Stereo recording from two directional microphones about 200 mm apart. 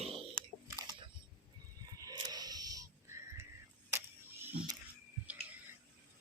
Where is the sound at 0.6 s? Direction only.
20° right (ahead or behind).